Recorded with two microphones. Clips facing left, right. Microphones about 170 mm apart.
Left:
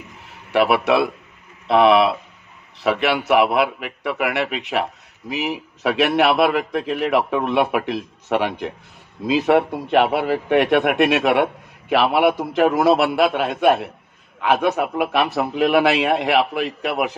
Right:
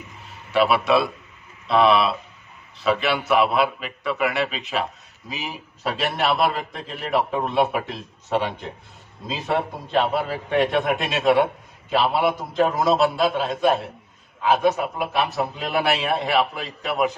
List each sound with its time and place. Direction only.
0.5 s a man's voice: 70° left (ahead or behind)